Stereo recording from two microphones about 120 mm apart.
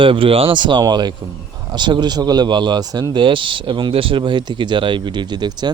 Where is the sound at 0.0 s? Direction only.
50° right (ahead or behind).